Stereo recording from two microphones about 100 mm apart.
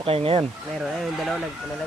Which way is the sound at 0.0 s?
75° right (ahead or behind).